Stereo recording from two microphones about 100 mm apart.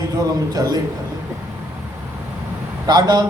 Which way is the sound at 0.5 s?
40° right (ahead or behind).